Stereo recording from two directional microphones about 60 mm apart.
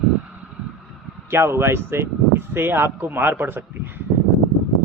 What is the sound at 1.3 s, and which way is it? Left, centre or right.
Speech, right.